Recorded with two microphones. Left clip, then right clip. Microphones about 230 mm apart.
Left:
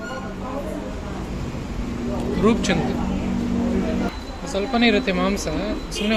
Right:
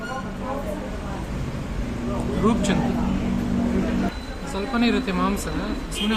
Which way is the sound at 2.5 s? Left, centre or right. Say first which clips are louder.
Left 3 dB; centre.